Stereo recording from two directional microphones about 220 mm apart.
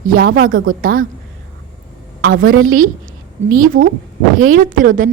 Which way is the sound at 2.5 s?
70° right (ahead or behind).